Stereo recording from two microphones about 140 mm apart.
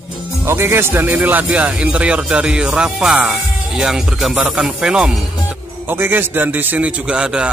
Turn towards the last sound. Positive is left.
turn(degrees=-5)  # may be behind; listen again after turning